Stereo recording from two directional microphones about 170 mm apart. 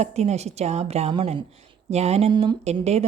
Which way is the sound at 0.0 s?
40° right (ahead or behind).